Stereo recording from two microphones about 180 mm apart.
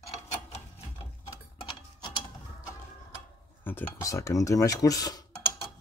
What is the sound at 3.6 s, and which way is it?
Speech, 10° left (ahead or behind).